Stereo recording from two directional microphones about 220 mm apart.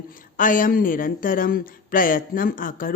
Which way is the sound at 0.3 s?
35° left (ahead or behind).